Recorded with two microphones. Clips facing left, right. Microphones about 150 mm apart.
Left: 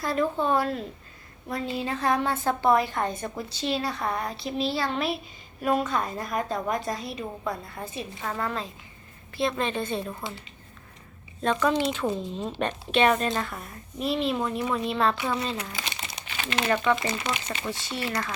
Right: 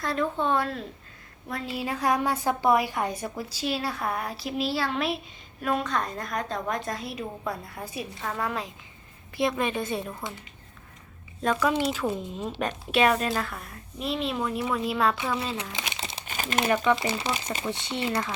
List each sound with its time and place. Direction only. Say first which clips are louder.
0.0 s a woman's voice: left 1 dB; 5° left (ahead or behind)
1.7 s a woman's voice: even; 10° right (ahead or behind)
11.4 s a woman's voice: left 1 dB; 5° right (ahead or behind)
16.0 s crumpling: right 2 dB; 30° right (ahead or behind)
16.2 s crumpling: right 2 dB; 45° right (ahead or behind)
16.6 s a woman's voice: even; 10° right (ahead or behind)